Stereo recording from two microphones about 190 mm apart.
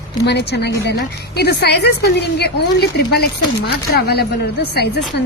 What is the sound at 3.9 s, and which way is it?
A woman's voice, 55° left (ahead or behind).